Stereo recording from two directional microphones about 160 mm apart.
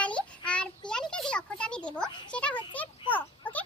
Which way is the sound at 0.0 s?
5° left (ahead or behind).